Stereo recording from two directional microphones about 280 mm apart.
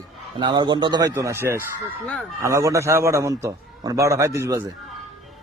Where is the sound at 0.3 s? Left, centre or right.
Centre.